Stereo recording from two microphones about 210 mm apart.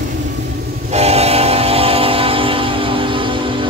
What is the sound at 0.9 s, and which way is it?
Train, 30° right (ahead or behind).